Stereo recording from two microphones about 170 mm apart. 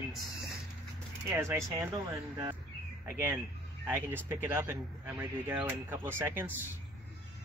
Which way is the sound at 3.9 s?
10° right (ahead or behind).